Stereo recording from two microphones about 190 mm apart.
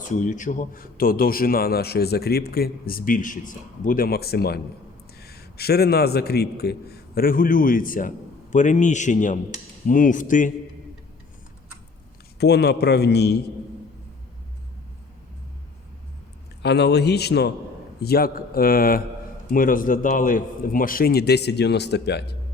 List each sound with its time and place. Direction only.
0.1 s a man's voice: 40° left (ahead or behind)
12.4 s a man's voice: 60° left (ahead or behind)
16.6 s a man's voice: 60° left (ahead or behind)